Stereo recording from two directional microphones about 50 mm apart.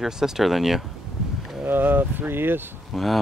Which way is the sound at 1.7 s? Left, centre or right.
Right.